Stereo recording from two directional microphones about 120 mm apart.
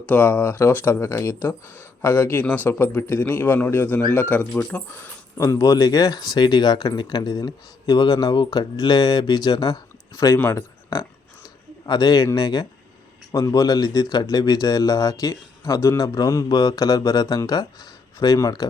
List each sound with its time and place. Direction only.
0.0 s a man's voice: 15° left (ahead or behind)
5.4 s speech: 25° left (ahead or behind)
11.9 s speech: 35° left (ahead or behind)